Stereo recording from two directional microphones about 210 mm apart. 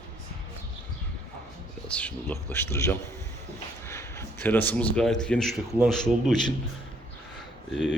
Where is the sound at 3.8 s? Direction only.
10° left (ahead or behind).